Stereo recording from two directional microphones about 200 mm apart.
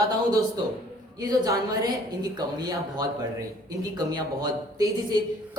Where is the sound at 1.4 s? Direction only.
20° right (ahead or behind).